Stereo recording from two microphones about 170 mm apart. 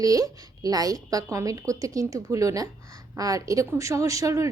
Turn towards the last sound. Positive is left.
turn(degrees=-20)  # may be behind; listen again after turning